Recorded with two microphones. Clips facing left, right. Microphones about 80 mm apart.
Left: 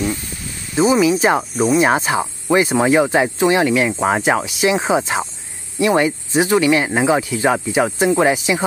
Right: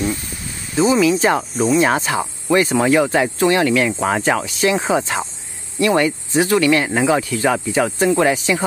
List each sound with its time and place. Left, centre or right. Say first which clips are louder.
0.7 s speech: left 1 dB; centre